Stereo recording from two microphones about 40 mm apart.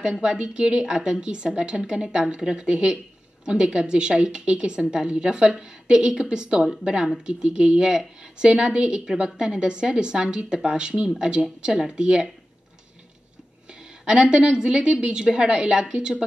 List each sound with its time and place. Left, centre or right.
0.2 s a woman's voice: right
13.7 s a woman's voice: right